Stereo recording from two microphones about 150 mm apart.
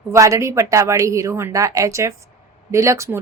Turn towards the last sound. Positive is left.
turn(degrees=-20)  # may be behind; listen again after turning